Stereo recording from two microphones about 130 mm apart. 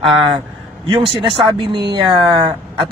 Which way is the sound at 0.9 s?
40° right (ahead or behind).